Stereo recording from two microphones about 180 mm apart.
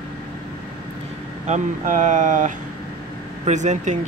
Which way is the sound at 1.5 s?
45° right (ahead or behind).